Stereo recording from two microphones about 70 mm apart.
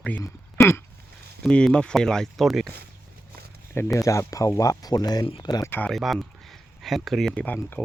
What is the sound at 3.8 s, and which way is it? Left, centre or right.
Speech, left.